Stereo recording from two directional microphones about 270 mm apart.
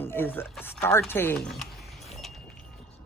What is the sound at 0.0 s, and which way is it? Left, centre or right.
Speech, centre.